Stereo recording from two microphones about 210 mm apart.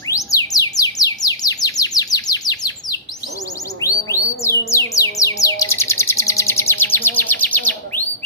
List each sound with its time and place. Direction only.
0.1 s chirp: 15° left (ahead or behind)
4.4 s music: 15° left (ahead or behind)